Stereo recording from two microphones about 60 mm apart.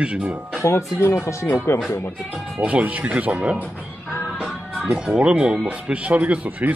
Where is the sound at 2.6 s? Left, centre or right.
Right.